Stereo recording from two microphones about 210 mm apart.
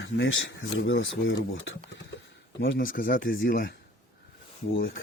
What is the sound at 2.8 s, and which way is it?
Speech, 40° left (ahead or behind).